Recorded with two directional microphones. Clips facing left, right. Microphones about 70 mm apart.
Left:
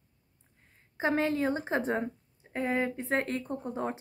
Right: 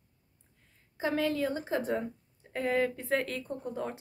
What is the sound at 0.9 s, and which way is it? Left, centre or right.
A woman's voice, left.